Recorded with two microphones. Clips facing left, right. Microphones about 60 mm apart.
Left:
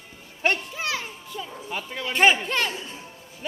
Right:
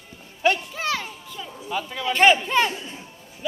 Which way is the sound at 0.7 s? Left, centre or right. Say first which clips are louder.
Right 3 dB; centre.